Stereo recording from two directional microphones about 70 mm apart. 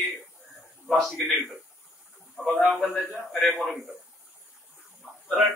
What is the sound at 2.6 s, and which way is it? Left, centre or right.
Speech, centre.